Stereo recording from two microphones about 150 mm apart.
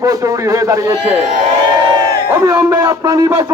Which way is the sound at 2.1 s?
25° right (ahead or behind).